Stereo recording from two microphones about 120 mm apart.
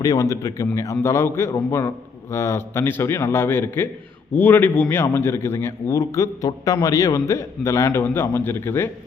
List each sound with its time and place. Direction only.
0.0 s a man's voice: 30° left (ahead or behind)